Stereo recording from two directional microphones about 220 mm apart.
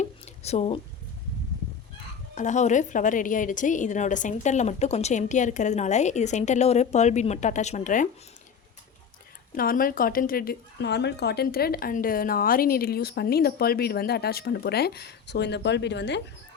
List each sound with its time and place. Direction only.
0.0 s a sound: 30° left (ahead or behind)
2.3 s a woman's voice: 35° left (ahead or behind)
9.6 s speech: 40° left (ahead or behind)